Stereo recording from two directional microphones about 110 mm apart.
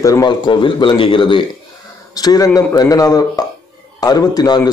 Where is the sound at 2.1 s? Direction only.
35° left (ahead or behind).